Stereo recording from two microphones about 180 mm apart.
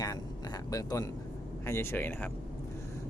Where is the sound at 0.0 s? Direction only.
20° left (ahead or behind).